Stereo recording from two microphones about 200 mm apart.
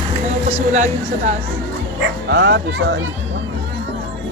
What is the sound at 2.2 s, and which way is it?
Speech, 60° right (ahead or behind).